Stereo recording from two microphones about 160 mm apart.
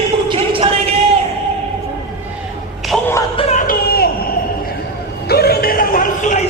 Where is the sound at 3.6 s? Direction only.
70° left (ahead or behind).